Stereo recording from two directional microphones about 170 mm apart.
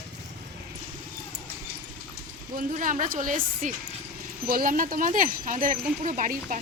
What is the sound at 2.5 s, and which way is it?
Speech, 50° right (ahead or behind).